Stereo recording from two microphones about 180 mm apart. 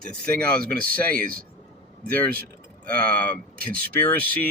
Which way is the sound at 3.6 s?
55° right (ahead or behind).